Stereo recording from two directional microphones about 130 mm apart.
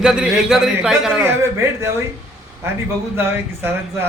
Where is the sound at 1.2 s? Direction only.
20° right (ahead or behind).